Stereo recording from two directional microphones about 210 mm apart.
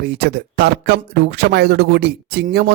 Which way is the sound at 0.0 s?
50° right (ahead or behind).